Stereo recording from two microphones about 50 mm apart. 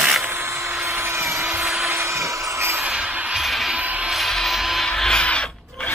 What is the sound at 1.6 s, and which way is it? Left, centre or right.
Vacuum cleaner, centre.